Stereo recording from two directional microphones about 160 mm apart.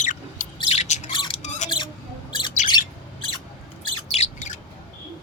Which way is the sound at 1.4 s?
50° left (ahead or behind).